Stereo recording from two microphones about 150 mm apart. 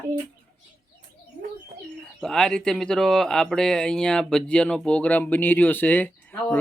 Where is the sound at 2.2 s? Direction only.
5° left (ahead or behind).